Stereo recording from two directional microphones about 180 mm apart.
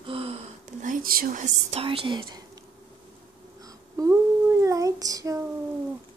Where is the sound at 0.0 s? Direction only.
30° right (ahead or behind).